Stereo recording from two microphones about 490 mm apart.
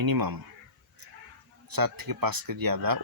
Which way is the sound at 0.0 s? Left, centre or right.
Right.